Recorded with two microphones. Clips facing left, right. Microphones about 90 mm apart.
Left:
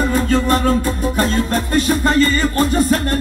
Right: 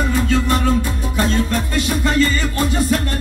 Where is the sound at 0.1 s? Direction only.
40° left (ahead or behind).